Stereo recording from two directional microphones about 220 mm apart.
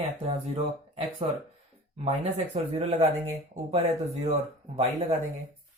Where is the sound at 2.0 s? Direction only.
30° right (ahead or behind).